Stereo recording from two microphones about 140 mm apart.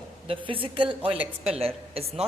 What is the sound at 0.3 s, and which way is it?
A woman's voice, 40° right (ahead or behind).